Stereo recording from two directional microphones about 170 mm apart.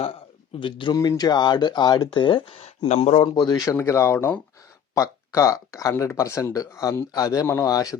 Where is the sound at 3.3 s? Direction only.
25° left (ahead or behind).